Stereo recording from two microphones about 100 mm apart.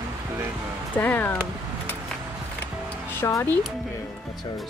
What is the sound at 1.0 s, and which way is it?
Music, 20° left (ahead or behind).